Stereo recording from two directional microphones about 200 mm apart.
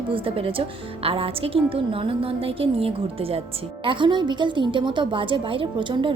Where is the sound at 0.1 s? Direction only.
25° right (ahead or behind).